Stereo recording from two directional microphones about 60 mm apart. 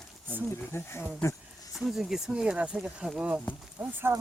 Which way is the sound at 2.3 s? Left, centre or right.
Centre.